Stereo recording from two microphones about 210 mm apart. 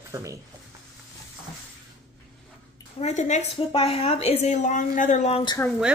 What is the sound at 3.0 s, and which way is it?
A woman's voice, 35° left (ahead or behind).